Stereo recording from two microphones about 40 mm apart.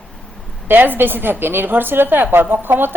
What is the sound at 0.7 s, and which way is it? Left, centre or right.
A woman's voice, right.